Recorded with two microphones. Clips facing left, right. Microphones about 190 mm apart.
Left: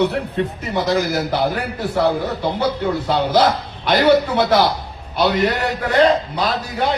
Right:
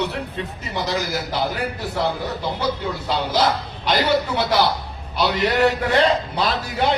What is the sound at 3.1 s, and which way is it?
A man's voice, 55° left (ahead or behind).